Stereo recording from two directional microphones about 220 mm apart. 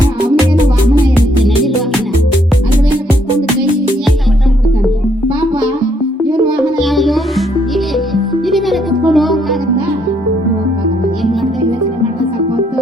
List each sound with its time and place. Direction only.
6.7 s music: centre (ahead or behind)